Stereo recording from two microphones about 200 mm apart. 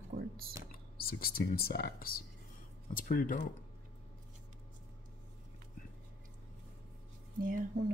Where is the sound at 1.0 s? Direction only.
50° left (ahead or behind).